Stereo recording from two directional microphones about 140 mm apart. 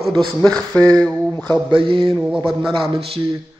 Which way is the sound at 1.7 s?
40° right (ahead or behind).